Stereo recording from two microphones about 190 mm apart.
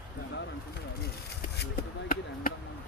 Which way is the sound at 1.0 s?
60° left (ahead or behind).